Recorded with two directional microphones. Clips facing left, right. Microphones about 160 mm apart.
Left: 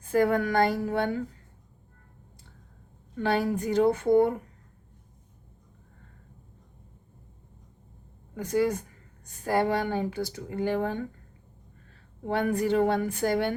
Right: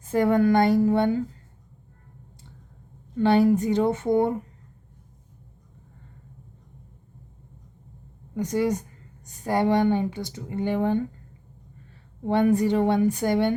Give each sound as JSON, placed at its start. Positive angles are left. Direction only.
{"t": 0.1, "sound": "speech", "side_deg": -20}
{"t": 3.2, "sound": "speech", "side_deg": -25}
{"t": 8.4, "sound": "speech", "side_deg": -20}
{"t": 12.3, "sound": "speech", "side_deg": -20}